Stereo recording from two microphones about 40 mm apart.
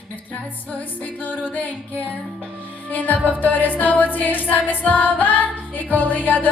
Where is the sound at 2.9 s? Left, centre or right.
Left.